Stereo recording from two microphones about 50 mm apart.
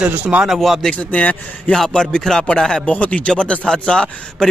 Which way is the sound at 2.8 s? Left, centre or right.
Left.